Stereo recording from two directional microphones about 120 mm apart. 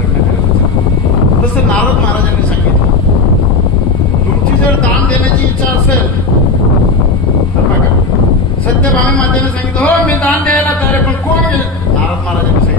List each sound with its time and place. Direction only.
9.3 s speech: 10° left (ahead or behind)